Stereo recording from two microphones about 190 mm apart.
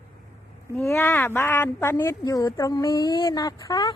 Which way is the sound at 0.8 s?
15° left (ahead or behind).